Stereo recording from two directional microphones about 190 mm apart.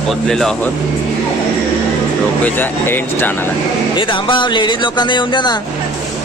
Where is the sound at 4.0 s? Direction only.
25° left (ahead or behind).